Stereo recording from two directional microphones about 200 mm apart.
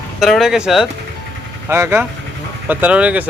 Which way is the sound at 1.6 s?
15° right (ahead or behind).